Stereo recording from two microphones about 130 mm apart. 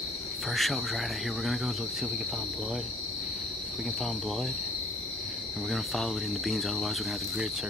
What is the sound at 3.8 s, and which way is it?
Speech, centre (ahead or behind).